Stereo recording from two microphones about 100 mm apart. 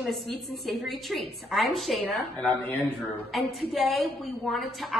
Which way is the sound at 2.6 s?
15° left (ahead or behind).